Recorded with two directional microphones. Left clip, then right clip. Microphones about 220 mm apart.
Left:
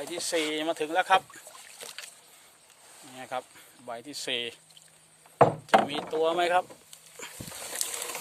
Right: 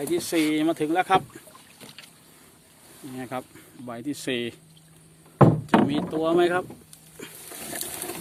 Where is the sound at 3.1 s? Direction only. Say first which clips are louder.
Right 2 dB; 5° left (ahead or behind).